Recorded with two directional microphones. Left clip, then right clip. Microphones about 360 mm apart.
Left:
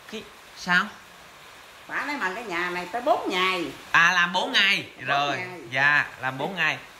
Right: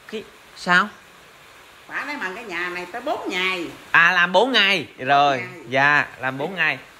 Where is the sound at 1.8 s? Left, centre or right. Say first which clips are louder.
Even; left.